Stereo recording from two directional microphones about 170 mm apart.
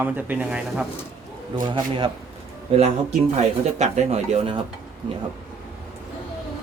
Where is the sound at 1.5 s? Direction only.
30° right (ahead or behind).